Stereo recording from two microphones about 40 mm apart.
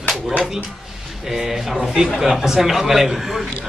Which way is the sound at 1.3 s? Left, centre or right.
Centre.